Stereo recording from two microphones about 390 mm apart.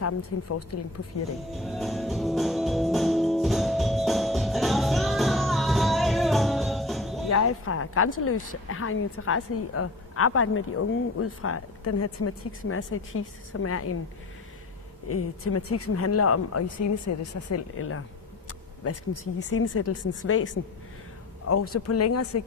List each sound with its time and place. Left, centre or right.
0.0 s a woman's voice: left
1.5 s music: centre
7.3 s a woman's voice: left
15.0 s a woman's voice: left
21.7 s a woman's voice: left